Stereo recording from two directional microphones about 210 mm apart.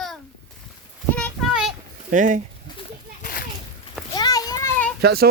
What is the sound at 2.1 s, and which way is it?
Speech, 40° right (ahead or behind).